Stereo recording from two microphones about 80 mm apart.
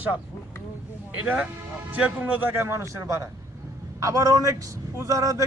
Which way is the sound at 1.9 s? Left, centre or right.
Centre.